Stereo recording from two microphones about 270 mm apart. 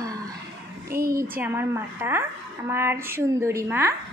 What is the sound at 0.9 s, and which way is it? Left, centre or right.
Speech, right.